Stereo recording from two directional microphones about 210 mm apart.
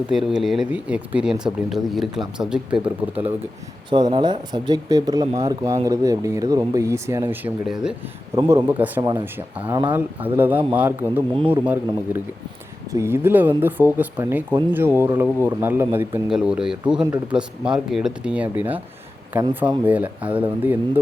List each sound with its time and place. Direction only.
0.1 s speech: centre (ahead or behind)
3.8 s speech: 20° right (ahead or behind)